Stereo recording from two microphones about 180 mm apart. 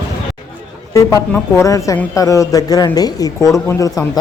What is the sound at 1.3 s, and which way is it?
Speech, 15° left (ahead or behind).